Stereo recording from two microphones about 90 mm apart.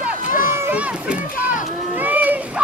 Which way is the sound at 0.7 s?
15° right (ahead or behind).